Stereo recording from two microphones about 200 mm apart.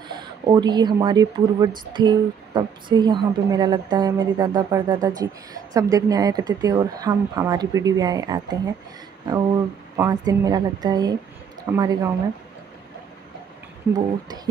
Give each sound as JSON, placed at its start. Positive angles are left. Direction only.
{"t": 0.1, "sound": "a woman's voice", "side_deg": -20}
{"t": 9.9, "sound": "a woman's voice", "side_deg": -20}
{"t": 13.9, "sound": "a woman's voice", "side_deg": -20}